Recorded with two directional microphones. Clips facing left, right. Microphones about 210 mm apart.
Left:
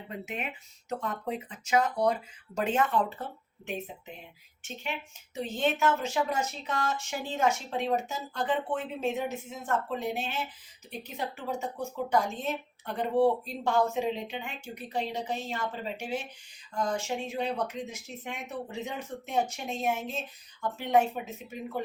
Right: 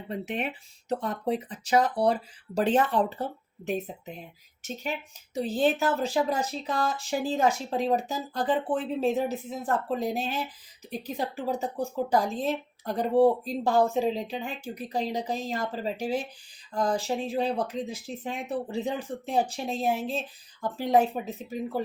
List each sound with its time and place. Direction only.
0.1 s a woman's voice: 35° right (ahead or behind)